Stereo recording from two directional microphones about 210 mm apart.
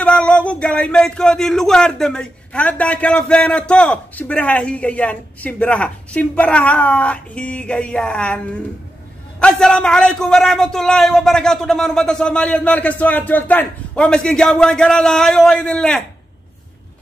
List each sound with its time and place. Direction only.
0.0 s speech: 5° left (ahead or behind)
9.4 s speech: 5° left (ahead or behind)